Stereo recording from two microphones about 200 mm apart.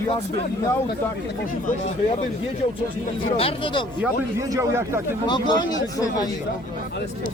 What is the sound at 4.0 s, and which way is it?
Speech, 15° right (ahead or behind).